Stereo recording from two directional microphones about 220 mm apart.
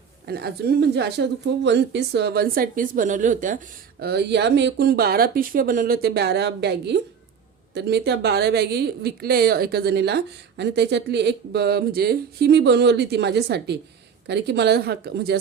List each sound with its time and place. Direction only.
0.3 s a woman's voice: 45° right (ahead or behind)
4.0 s a woman's voice: 50° right (ahead or behind)